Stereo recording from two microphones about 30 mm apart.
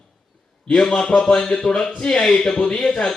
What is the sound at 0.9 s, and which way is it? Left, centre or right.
Speech, left.